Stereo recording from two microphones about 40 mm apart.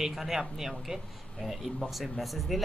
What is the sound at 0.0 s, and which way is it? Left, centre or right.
Speech, centre.